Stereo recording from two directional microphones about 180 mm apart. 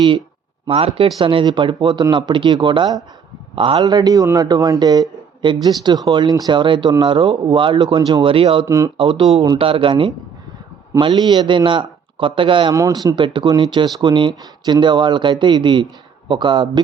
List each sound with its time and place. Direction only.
0.7 s speech: 35° right (ahead or behind)
8.6 s speech: 15° right (ahead or behind)
9.0 s speech: 30° right (ahead or behind)